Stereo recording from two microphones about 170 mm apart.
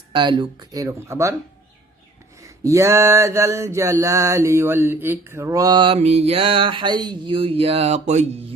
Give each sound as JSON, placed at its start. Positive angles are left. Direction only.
{"t": 0.1, "sound": "mantra", "side_deg": -25}
{"t": 2.4, "sound": "a sound", "side_deg": -20}
{"t": 4.0, "sound": "mantra", "side_deg": -20}